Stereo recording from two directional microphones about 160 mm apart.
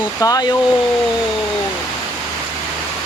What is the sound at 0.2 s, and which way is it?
Speech, 20° left (ahead or behind).